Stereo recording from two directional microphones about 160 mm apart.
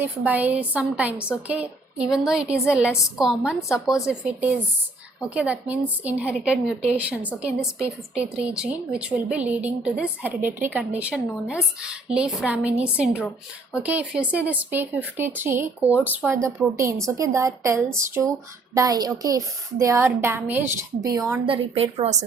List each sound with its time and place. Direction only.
0.0 s a woman's voice: 10° right (ahead or behind)
21.4 s a woman's voice: 35° right (ahead or behind)